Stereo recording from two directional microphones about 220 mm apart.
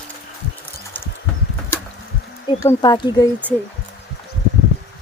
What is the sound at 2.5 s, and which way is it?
Speech, 15° left (ahead or behind).